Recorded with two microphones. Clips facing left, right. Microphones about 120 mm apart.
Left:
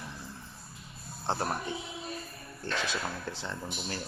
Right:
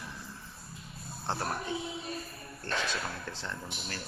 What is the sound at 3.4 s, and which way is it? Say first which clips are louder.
Music: left 3 dB; 15° left (ahead or behind).